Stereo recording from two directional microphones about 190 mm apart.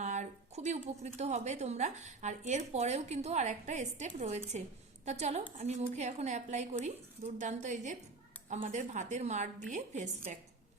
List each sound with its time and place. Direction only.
0.0 s a woman's voice: 40° right (ahead or behind)